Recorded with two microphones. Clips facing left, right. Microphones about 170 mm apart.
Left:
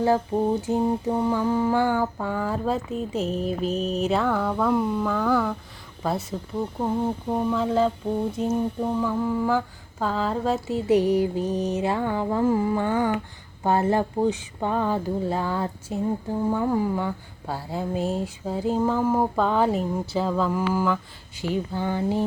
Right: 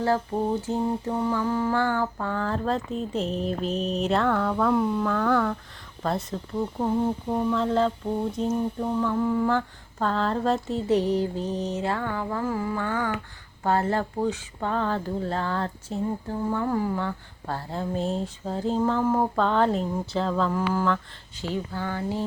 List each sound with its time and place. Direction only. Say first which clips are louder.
0.0 s mantra: left 3 dB; 15° left (ahead or behind)
8.4 s speech: left 1 dB; 10° left (ahead or behind)
21.4 s a sound: left 4 dB; 15° left (ahead or behind)